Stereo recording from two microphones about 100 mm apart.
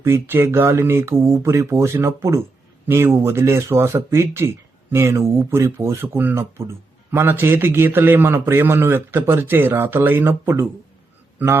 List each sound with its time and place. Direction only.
0.0 s speech: 20° right (ahead or behind)